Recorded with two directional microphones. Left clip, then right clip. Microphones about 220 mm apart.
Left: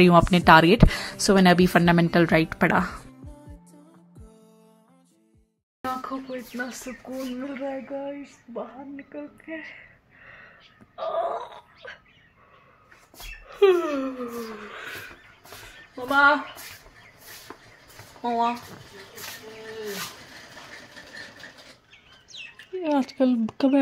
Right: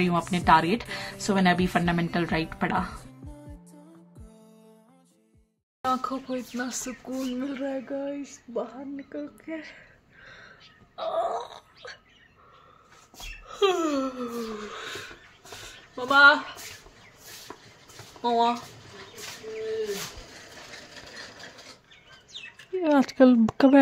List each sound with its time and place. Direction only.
0.0 s speech: 30° left (ahead or behind)
3.0 s music: centre (ahead or behind)
5.9 s speech: 5° right (ahead or behind)
11.1 s a sound: 5° right (ahead or behind)
13.5 s speech: 10° right (ahead or behind)
16.1 s speech: 15° right (ahead or behind)
18.2 s speech: 15° right (ahead or behind)
22.8 s speech: 20° right (ahead or behind)